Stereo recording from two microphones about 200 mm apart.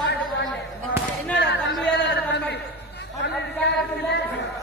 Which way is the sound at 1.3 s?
60° left (ahead or behind).